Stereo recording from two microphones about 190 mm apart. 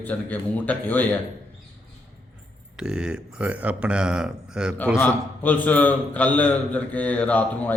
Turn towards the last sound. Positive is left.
turn(degrees=10)  # may be behind; listen again after turning